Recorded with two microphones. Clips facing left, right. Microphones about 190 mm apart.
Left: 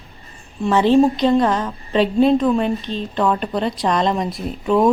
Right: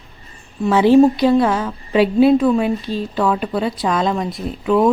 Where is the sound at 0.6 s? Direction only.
10° right (ahead or behind).